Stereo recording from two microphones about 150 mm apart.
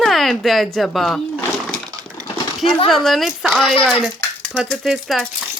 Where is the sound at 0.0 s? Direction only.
Centre (ahead or behind).